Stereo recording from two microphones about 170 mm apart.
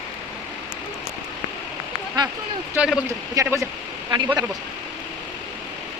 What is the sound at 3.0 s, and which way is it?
Speech, 15° right (ahead or behind).